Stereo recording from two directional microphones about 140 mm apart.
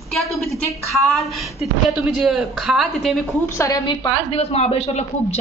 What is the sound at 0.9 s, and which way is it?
Speech, centre (ahead or behind).